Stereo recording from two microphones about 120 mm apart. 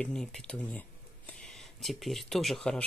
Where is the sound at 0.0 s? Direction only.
5° left (ahead or behind).